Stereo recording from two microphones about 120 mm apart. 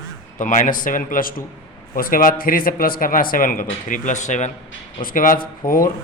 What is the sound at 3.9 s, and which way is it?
Speech, 90° left.